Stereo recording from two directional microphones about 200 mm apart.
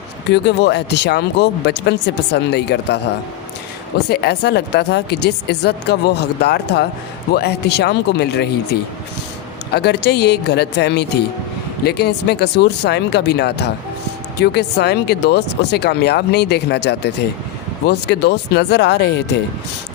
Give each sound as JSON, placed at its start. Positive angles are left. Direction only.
{"t": 0.3, "sound": "speech", "side_deg": 55}
{"t": 4.1, "sound": "speech", "side_deg": 55}